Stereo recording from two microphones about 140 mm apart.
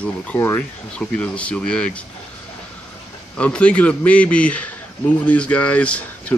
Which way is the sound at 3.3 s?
10° left (ahead or behind).